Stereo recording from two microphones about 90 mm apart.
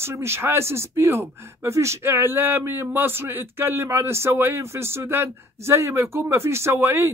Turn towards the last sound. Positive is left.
turn(degrees=-25)  # may be behind; listen again after turning